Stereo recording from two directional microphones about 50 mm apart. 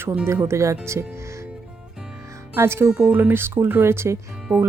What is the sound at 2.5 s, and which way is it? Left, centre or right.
Speech, right.